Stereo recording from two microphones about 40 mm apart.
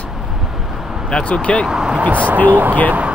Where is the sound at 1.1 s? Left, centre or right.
Left.